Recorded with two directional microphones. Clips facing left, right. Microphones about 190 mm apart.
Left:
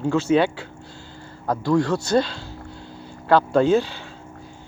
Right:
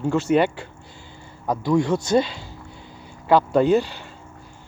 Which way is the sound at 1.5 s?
20° right (ahead or behind).